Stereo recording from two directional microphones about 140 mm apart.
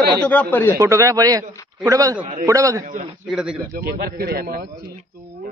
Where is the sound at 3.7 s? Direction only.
90° right.